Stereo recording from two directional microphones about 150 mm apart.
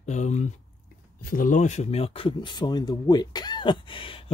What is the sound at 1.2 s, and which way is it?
Speech, 65° left (ahead or behind).